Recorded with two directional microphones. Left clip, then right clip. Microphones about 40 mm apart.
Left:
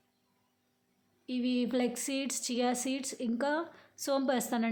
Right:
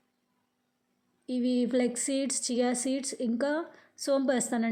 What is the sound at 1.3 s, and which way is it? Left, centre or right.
Speech, right.